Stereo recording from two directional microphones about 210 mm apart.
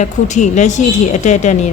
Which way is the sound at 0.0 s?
35° left (ahead or behind).